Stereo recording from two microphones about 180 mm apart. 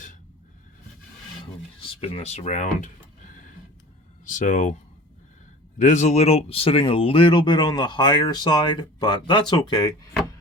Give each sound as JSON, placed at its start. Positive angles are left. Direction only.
{"t": 1.8, "sound": "speech", "side_deg": 35}
{"t": 4.3, "sound": "speech", "side_deg": 45}
{"t": 5.8, "sound": "speech", "side_deg": 40}